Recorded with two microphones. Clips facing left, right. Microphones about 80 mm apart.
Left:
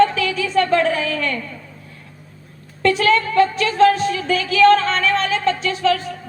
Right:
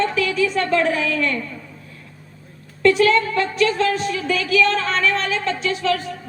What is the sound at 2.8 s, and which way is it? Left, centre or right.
A woman's voice, left.